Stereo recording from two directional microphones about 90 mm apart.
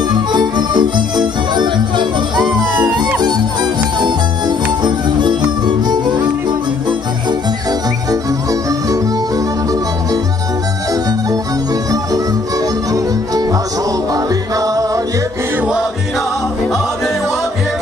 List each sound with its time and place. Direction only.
0.1 s music: 55° right (ahead or behind)
4.8 s music: 55° right (ahead or behind)
8.1 s music: 40° right (ahead or behind)
14.1 s music: 40° right (ahead or behind)